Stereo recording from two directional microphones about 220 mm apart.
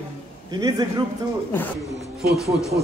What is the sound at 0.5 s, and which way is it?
Speech, 15° right (ahead or behind).